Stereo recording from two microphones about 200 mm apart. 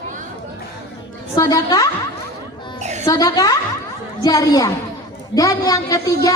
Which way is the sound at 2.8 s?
35° right (ahead or behind).